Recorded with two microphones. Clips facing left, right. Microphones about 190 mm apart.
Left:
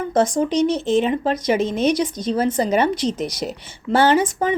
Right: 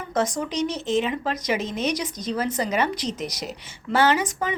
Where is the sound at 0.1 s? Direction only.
30° left (ahead or behind).